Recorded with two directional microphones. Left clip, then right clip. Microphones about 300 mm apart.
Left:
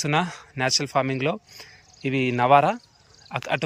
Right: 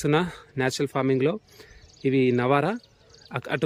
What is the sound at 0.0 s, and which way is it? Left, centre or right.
Speech, centre.